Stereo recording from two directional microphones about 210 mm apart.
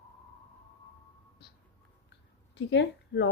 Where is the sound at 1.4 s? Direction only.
55° left (ahead or behind).